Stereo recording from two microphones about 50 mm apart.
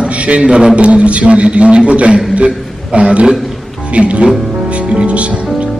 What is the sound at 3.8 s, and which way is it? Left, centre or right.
Speech, right.